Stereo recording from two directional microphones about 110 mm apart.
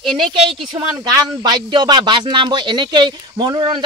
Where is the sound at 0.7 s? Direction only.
40° right (ahead or behind).